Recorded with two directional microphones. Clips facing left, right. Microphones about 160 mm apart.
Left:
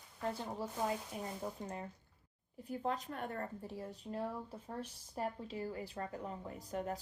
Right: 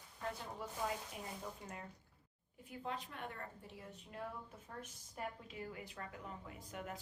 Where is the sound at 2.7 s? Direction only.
40° left (ahead or behind).